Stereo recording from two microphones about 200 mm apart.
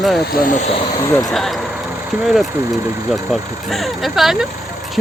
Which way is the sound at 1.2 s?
Centre (ahead or behind).